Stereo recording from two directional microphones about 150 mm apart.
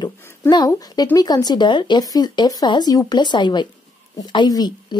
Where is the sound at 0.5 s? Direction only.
25° left (ahead or behind).